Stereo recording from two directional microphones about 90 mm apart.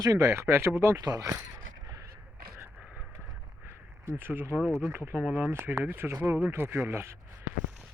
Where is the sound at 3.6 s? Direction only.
30° right (ahead or behind).